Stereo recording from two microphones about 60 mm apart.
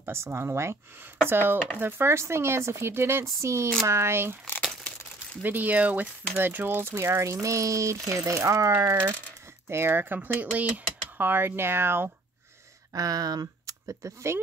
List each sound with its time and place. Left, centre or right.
0.0 s speech: right
5.4 s speech: right
7.3 s speech: right
9.7 s speech: right
12.9 s speech: right